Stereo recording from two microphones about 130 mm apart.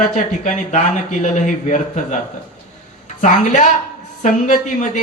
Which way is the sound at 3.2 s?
75° left (ahead or behind).